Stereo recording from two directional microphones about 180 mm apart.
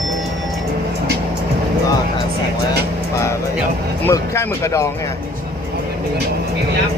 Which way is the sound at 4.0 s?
15° left (ahead or behind).